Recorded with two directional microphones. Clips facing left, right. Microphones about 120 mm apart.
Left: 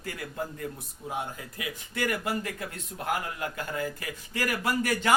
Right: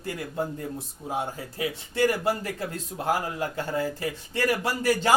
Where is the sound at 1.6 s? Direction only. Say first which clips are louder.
Right 8 dB; 30° right (ahead or behind).